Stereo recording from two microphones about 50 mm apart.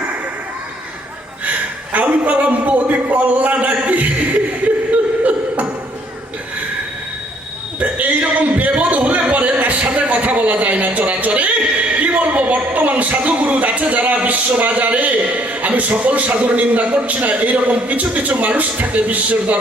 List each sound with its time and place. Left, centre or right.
1.9 s a man's voice: right
4.9 s a sound: right
7.8 s a man's voice: right